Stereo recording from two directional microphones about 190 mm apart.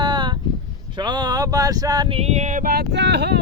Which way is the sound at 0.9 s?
20° right (ahead or behind).